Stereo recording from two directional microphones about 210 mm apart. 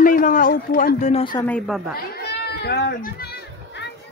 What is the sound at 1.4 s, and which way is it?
Speech, 5° left (ahead or behind).